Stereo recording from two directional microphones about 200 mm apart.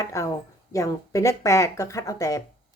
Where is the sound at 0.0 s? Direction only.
15° left (ahead or behind).